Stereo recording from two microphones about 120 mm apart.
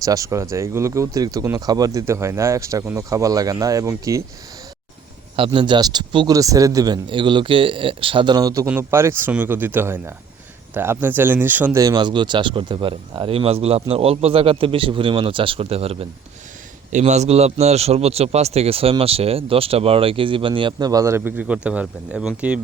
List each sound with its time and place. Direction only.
0.0 s speech: 30° right (ahead or behind)
5.5 s speech: 40° right (ahead or behind)
6.3 s speech: 30° right (ahead or behind)
8.6 s speech: 20° right (ahead or behind)
11.8 s speech: 35° right (ahead or behind); by 16.0 s 55° right (ahead or behind)
16.9 s speech: 75° right (ahead or behind); by 22.6 s 10° right (ahead or behind)